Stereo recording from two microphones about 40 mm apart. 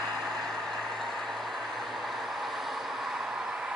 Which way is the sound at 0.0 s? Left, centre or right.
Centre.